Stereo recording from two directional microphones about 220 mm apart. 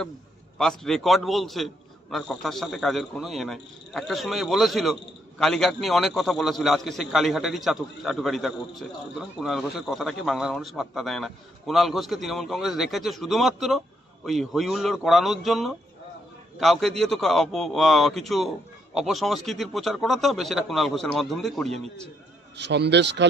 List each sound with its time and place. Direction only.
0.6 s a man's voice: centre (ahead or behind)
22.6 s speech: 50° right (ahead or behind)